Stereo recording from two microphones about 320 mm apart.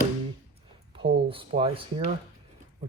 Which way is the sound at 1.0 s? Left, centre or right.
Centre.